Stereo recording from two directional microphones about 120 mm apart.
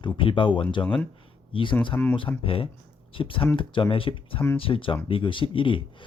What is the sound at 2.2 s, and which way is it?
Speech, 50° left (ahead or behind).